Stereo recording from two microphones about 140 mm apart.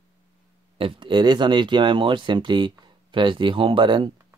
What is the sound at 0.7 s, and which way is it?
Speech, 40° right (ahead or behind).